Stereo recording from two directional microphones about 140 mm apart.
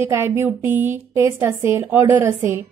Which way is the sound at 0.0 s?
20° right (ahead or behind).